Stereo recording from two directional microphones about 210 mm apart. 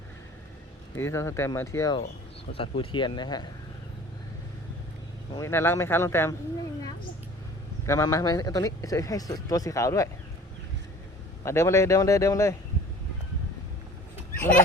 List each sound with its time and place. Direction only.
0.9 s speech: 15° left (ahead or behind)
5.3 s speech: 10° left (ahead or behind)
7.9 s speech: 15° left (ahead or behind)
11.4 s speech: 15° left (ahead or behind)